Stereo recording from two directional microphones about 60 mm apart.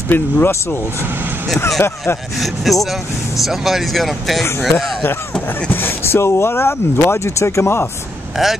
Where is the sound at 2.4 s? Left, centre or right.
Centre.